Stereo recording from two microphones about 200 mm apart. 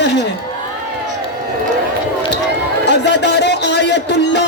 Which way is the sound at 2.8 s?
60° left (ahead or behind).